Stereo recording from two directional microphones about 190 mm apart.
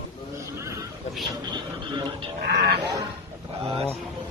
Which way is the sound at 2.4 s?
60° right (ahead or behind).